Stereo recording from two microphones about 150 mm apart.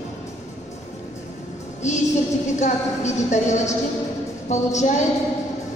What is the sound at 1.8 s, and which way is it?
Music, 50° left (ahead or behind).